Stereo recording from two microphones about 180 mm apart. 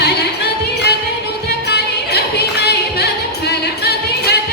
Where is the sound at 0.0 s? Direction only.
65° left (ahead or behind).